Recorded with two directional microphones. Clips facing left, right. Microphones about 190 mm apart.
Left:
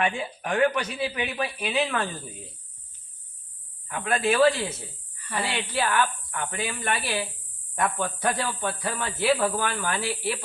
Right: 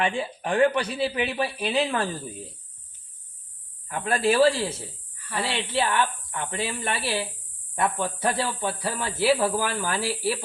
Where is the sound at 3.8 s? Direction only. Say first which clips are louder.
Right 2 dB; 35° right (ahead or behind).